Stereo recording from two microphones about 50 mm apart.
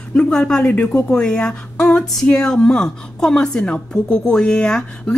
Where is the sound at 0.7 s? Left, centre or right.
Left.